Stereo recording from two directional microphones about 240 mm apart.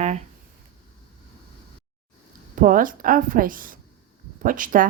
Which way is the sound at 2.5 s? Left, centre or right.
Right.